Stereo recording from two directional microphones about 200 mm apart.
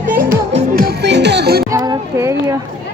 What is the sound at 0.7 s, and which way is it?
Music, 50° right (ahead or behind).